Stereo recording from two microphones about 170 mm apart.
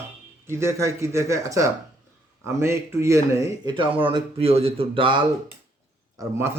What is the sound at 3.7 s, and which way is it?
Speech, 30° right (ahead or behind).